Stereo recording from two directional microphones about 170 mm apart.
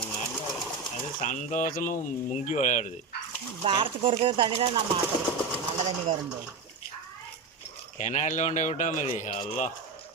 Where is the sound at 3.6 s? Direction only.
30° right (ahead or behind).